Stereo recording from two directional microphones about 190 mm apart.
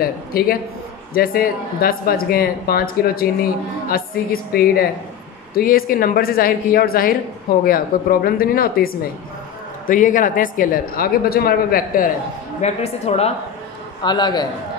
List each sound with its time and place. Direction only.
0.0 s speech: 50° left (ahead or behind)
12.6 s speech: 35° left (ahead or behind)
14.0 s a man's voice: 20° left (ahead or behind)